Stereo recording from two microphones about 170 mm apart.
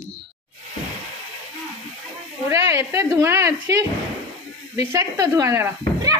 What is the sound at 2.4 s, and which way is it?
A woman's voice, 15° right (ahead or behind).